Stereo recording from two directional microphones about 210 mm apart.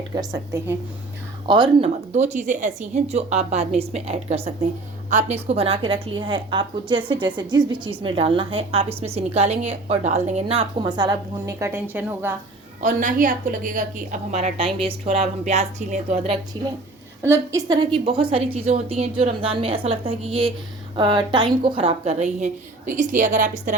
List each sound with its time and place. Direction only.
0.1 s a woman's voice: 15° right (ahead or behind)
2.1 s a woman's voice: 35° right (ahead or behind); by 12.4 s 10° right (ahead or behind)
12.8 s a woman's voice: 40° right (ahead or behind)
17.2 s a woman's voice: 15° right (ahead or behind)
17.9 s a woman's voice: 25° right (ahead or behind)